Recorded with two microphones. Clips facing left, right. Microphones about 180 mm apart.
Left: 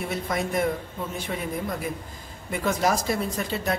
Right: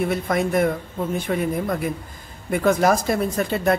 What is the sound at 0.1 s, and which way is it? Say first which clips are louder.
Speech: right 6 dB; 60° right (ahead or behind).